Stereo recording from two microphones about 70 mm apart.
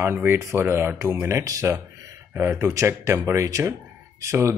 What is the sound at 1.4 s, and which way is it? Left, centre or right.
Speech, right.